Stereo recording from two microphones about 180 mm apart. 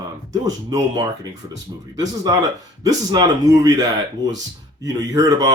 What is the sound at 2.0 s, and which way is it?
Speech, 20° right (ahead or behind).